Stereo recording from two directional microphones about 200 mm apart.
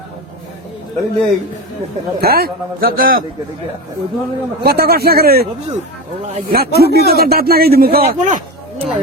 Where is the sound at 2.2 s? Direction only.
50° right (ahead or behind).